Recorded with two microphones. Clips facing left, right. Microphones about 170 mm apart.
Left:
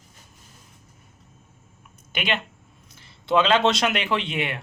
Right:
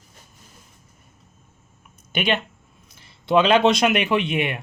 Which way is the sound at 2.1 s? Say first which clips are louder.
Right 5 dB; 20° right (ahead or behind).